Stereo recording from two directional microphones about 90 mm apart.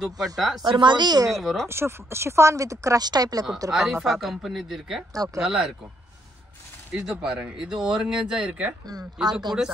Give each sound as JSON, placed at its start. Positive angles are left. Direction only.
{"t": 0.0, "sound": "speech", "side_deg": 0}
{"t": 0.7, "sound": "a woman's voice", "side_deg": -60}
{"t": 1.4, "sound": "speech", "side_deg": 0}
{"t": 1.7, "sound": "speech", "side_deg": -30}
{"t": 3.7, "sound": "speech", "side_deg": 0}
{"t": 5.1, "sound": "speech", "side_deg": -40}
{"t": 5.4, "sound": "speech", "side_deg": -5}
{"t": 6.9, "sound": "speech", "side_deg": -5}
{"t": 9.3, "sound": "a woman's voice", "side_deg": -50}